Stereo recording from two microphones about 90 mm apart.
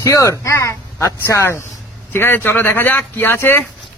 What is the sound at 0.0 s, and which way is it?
Speech, 35° left (ahead or behind).